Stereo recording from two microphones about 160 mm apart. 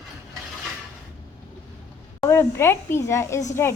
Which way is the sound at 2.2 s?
15° left (ahead or behind).